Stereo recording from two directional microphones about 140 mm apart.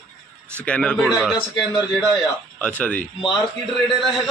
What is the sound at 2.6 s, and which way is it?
Speech, 10° left (ahead or behind).